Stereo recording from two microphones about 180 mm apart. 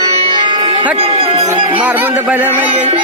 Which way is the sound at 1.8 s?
10° right (ahead or behind).